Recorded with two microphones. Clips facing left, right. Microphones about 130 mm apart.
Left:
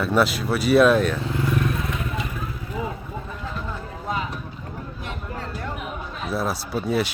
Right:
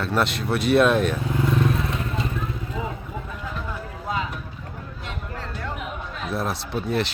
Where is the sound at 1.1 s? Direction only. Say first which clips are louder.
Right 1 dB; 20° right (ahead or behind).